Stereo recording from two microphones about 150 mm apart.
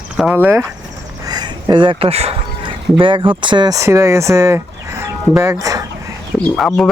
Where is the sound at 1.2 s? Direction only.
25° right (ahead or behind).